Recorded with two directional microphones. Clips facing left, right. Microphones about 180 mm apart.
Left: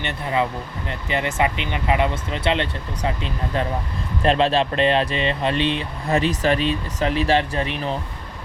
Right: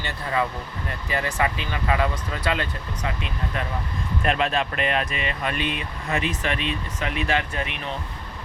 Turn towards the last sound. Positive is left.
turn(degrees=35)  # may be behind; listen again after turning